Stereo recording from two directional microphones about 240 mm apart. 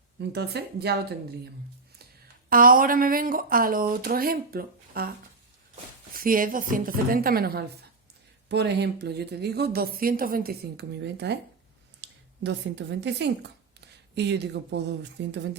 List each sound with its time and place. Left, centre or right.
0.2 s a woman's voice: right
2.5 s speech: right
6.1 s a woman's voice: right